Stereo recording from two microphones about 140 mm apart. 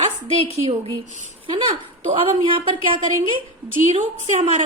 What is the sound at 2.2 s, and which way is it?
Speech, 40° right (ahead or behind).